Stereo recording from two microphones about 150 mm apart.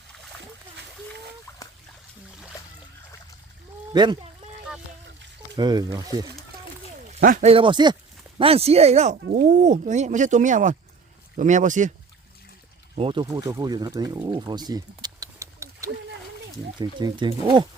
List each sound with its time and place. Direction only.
1.5 s a sound: 20° left (ahead or behind)
3.9 s speech: 30° right (ahead or behind)
5.5 s speech: 30° right (ahead or behind)
7.2 s speech: 70° right (ahead or behind)
7.4 s speech: 35° right (ahead or behind); by 11.9 s 55° right (ahead or behind)
13.0 s speech: 35° right (ahead or behind)